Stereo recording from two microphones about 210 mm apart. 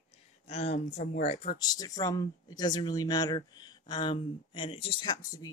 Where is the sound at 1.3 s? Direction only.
25° left (ahead or behind).